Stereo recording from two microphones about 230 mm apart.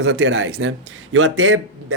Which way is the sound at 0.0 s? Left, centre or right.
Right.